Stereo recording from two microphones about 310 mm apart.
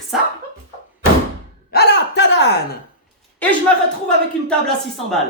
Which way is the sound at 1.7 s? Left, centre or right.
Left.